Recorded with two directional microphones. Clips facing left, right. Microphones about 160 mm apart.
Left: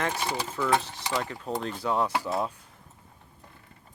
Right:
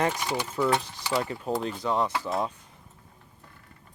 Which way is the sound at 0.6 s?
25° right (ahead or behind).